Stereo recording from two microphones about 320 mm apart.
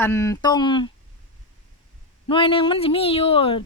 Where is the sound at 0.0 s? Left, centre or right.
Centre.